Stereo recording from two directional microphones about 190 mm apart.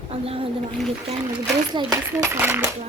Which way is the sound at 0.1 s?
30° right (ahead or behind).